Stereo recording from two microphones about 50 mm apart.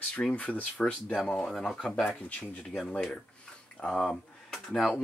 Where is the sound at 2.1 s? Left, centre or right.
Left.